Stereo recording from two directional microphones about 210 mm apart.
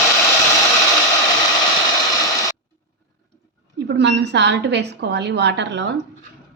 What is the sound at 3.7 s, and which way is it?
A woman's voice, 55° right (ahead or behind).